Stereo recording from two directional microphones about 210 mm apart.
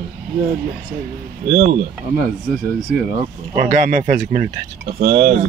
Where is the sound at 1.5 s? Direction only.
40° right (ahead or behind).